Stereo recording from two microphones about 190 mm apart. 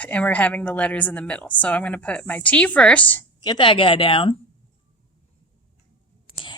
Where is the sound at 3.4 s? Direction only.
25° left (ahead or behind).